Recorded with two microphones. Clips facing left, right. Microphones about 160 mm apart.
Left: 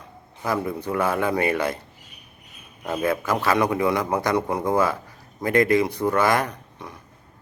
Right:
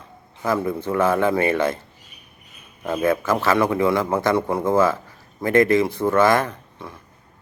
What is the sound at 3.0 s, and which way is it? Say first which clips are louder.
Speech: right 3 dB; 15° left (ahead or behind).